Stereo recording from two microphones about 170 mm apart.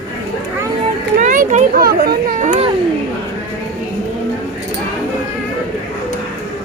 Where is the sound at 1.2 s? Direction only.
45° right (ahead or behind).